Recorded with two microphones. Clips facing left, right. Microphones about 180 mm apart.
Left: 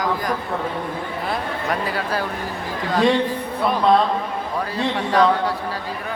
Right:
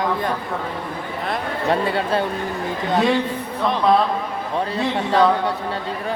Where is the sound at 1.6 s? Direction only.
25° right (ahead or behind).